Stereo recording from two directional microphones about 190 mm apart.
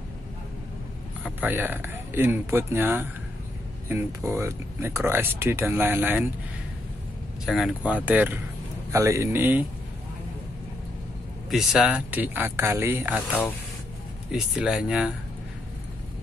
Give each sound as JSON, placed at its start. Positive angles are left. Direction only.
{"t": 1.2, "sound": "speech", "side_deg": -10}
{"t": 7.4, "sound": "speech", "side_deg": 0}
{"t": 11.5, "sound": "speech", "side_deg": -5}
{"t": 14.3, "sound": "speech", "side_deg": -5}